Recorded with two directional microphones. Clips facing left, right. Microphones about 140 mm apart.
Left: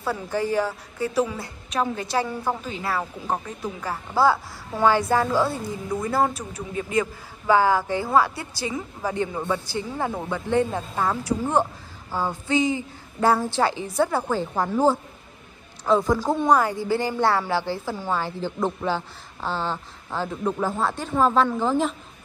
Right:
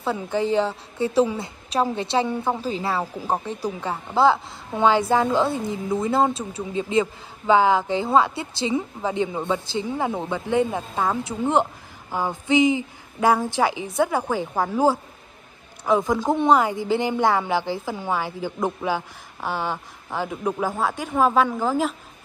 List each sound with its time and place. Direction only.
0.0 s a woman's voice: 20° right (ahead or behind)